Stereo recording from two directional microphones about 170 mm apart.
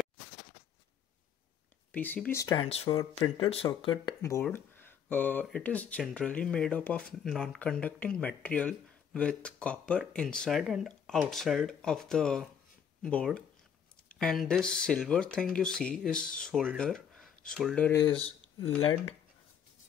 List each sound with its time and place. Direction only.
1.9 s speech: 10° left (ahead or behind)
2.4 s speech: 25° left (ahead or behind)
4.2 s speech: 15° left (ahead or behind); by 17.7 s centre (ahead or behind)
17.7 s speech: 10° left (ahead or behind)